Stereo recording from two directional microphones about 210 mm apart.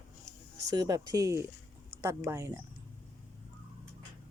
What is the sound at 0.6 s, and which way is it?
A woman's voice, 20° right (ahead or behind).